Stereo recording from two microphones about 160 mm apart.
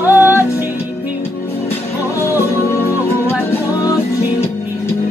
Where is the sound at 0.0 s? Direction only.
15° left (ahead or behind).